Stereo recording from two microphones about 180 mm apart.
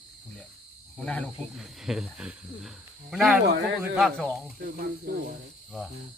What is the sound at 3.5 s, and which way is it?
Cricket, 70° right (ahead or behind).